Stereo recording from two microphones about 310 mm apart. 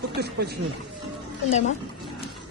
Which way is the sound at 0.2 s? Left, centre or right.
Right.